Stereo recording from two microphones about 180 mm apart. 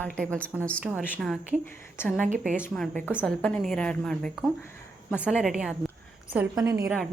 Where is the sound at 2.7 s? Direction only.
5° left (ahead or behind).